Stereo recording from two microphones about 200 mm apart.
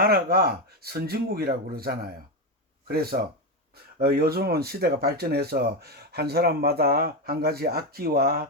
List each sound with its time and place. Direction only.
0.0 s speech: 50° right (ahead or behind)